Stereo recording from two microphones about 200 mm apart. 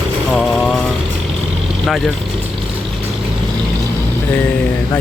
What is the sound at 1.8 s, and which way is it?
Speech, centre (ahead or behind).